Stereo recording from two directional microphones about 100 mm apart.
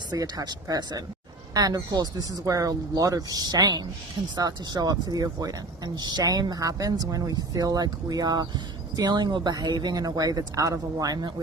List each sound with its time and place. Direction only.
0.1 s speech: 40° right (ahead or behind)